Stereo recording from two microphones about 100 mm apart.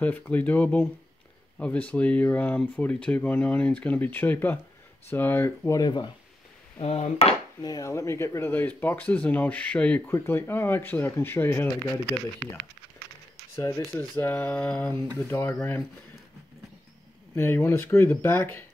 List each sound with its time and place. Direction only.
0.0 s speech: 15° left (ahead or behind)
5.7 s speech: 45° left (ahead or behind)
6.8 s a sound: 85° left
7.6 s speech: 35° left (ahead or behind)
13.6 s speech: 35° left (ahead or behind)
14.1 s speech: 20° left (ahead or behind)
17.4 s speech: 25° left (ahead or behind)